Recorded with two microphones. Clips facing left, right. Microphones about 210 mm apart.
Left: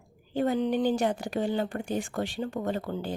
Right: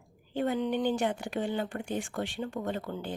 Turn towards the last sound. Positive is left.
turn(degrees=35)  # may be behind; listen again after turning